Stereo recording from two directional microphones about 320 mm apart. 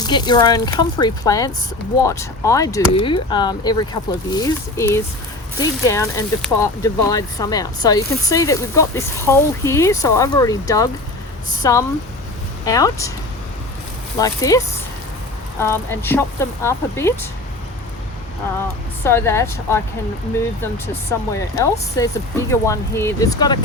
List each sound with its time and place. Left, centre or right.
0.0 s speech: centre
14.2 s speech: centre
19.0 s speech: centre